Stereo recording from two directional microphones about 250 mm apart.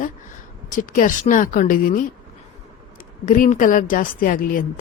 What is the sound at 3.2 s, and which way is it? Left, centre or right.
A woman's voice, left.